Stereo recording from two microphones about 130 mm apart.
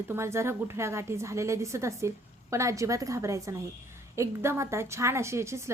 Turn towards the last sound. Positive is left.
turn(degrees=-20)  # may be behind; listen again after turning